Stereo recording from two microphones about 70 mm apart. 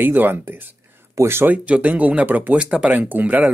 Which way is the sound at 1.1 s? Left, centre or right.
Right.